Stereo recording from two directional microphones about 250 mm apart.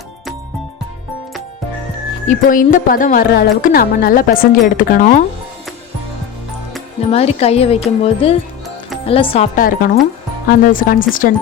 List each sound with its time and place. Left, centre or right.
2.2 s speech: left
7.1 s speech: left